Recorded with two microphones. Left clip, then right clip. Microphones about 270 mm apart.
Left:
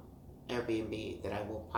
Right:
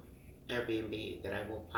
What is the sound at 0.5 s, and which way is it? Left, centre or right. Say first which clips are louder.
Speech: left 1 dB; left.